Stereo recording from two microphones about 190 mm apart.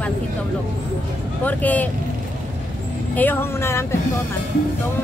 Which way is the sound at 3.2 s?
10° left (ahead or behind).